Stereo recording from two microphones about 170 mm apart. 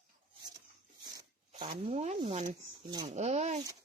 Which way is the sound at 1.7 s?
40° right (ahead or behind).